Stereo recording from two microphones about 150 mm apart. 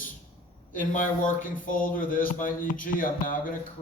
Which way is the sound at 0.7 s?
60° left (ahead or behind).